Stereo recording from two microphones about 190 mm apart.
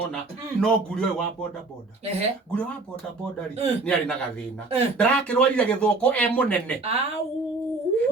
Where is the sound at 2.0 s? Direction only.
35° right (ahead or behind).